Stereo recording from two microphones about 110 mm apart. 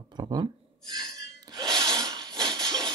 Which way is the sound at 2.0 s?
40° right (ahead or behind).